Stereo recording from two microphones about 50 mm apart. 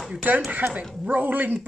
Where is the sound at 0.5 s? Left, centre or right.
Right.